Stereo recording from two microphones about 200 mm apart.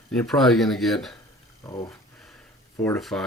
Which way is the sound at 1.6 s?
15° left (ahead or behind).